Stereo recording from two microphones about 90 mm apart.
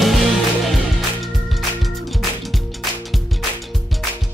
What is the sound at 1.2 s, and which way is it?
Music, centre (ahead or behind).